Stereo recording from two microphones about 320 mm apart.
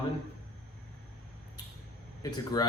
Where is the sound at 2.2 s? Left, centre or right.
Centre.